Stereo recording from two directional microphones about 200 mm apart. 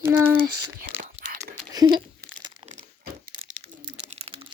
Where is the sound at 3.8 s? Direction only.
30° right (ahead or behind).